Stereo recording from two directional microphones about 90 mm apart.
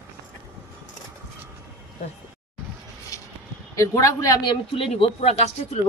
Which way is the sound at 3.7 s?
35° left (ahead or behind).